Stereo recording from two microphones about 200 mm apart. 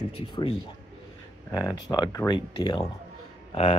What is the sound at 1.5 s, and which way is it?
Speech, 20° left (ahead or behind).